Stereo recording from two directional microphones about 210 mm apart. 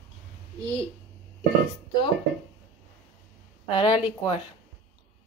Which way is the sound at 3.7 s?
25° left (ahead or behind).